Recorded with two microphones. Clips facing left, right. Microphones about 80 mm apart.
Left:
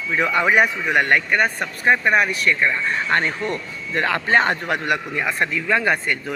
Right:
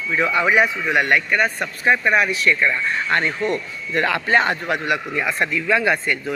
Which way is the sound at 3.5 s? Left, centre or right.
Left.